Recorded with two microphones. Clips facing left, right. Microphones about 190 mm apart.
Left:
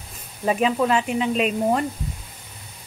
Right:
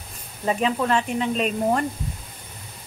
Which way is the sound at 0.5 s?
5° left (ahead or behind).